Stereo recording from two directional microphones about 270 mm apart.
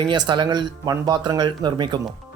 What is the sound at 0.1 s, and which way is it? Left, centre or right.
Speech, centre.